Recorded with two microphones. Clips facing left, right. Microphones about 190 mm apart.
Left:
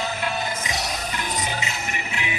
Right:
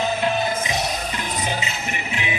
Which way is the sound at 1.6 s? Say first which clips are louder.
Right 2 dB; 20° right (ahead or behind).